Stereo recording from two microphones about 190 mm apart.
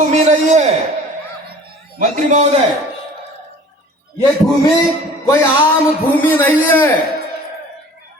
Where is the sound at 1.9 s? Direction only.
40° right (ahead or behind).